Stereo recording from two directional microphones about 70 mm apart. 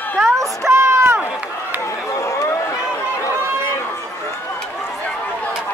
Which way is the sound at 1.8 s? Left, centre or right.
Left.